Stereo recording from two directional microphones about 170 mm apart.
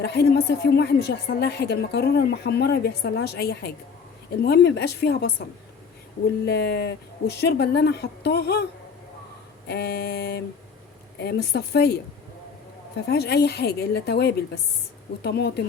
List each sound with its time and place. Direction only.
0.0 s a woman's voice: 75° left (ahead or behind)
4.4 s a woman's voice: 80° left
6.4 s a woman's voice: 80° left
9.6 s a woman's voice: 75° left (ahead or behind)
13.1 s a woman's voice: 75° left (ahead or behind)